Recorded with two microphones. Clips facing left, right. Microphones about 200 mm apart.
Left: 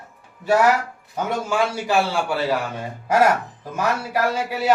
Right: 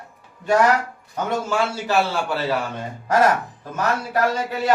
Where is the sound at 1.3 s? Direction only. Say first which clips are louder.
Even; 10° left (ahead or behind).